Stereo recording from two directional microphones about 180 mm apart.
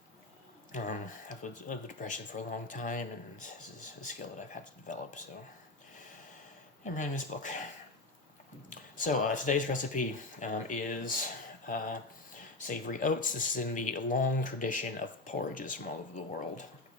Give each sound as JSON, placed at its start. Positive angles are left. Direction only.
{"t": 0.7, "sound": "speech", "side_deg": 45}
{"t": 6.8, "sound": "speech", "side_deg": 45}
{"t": 8.7, "sound": "speech", "side_deg": 45}